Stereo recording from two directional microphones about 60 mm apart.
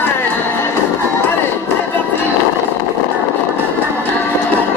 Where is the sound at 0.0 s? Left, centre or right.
Left.